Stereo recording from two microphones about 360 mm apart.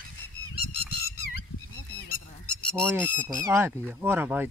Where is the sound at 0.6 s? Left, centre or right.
Left.